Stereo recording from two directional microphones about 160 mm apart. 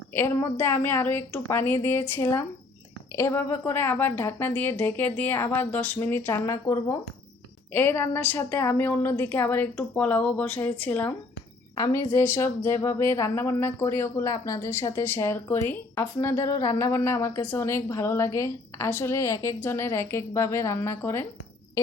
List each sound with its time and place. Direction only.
0.1 s a woman's voice: 15° left (ahead or behind)
11.7 s a woman's voice: 20° left (ahead or behind)